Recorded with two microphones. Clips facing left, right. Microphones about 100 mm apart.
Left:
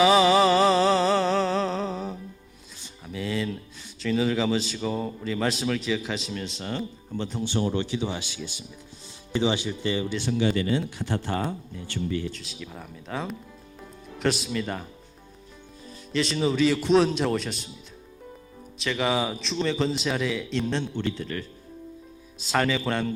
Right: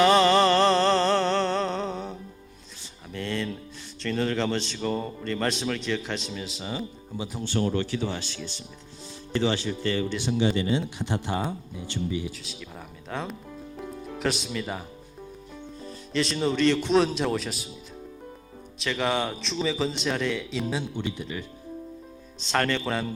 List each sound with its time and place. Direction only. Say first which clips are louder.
0.0 s a sound: left 1 dB; 5° left (ahead or behind)
4.0 s a man's voice: left 2 dB; 5° left (ahead or behind)
7.4 s speech: right 1 dB; 20° left (ahead or behind)
10.2 s speech: even; 25° right (ahead or behind)
12.3 s a man's voice: left 1 dB; centre (ahead or behind)
16.1 s a man's voice: left 1 dB; centre (ahead or behind)
18.8 s a man's voice: left 1 dB; centre (ahead or behind)
22.4 s a man's voice: left 1 dB; 5° left (ahead or behind)